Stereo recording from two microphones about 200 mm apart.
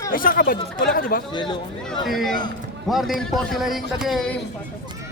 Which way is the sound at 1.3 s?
25° left (ahead or behind).